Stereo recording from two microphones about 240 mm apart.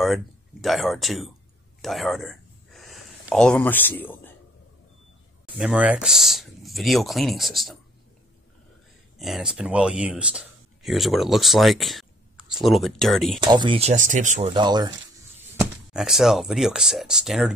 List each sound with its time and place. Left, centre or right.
0.0 s speech: centre
5.6 s speech: centre
9.2 s speech: centre
13.4 s speech: centre
14.5 s speech: centre
15.9 s speech: centre